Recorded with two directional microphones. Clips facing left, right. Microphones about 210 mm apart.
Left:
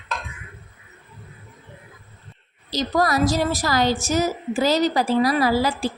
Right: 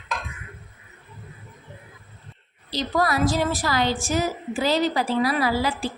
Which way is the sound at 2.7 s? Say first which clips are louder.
Left 2 dB; 40° left (ahead or behind).